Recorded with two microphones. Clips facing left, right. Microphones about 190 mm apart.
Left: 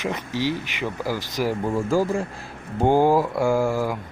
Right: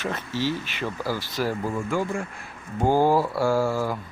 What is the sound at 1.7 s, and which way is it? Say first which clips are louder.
Speech: left 5 dB; 35° left (ahead or behind).